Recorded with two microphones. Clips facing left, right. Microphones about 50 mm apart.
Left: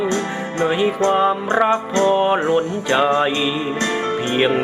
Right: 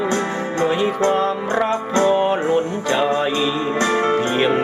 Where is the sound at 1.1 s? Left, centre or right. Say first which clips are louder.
Left 2 dB; left.